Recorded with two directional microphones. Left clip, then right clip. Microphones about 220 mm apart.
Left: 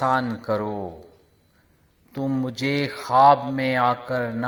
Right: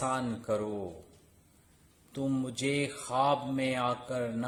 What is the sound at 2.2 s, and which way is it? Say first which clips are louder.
Speech: left 7 dB; 10° left (ahead or behind).